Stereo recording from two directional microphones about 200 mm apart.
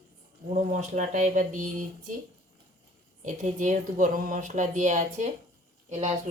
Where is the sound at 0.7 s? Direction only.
35° right (ahead or behind).